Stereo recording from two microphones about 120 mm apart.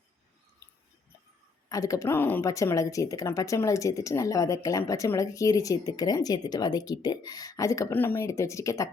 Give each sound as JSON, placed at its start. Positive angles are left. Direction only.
{"t": 1.7, "sound": "speech", "side_deg": 30}
{"t": 2.5, "sound": "speech", "side_deg": 25}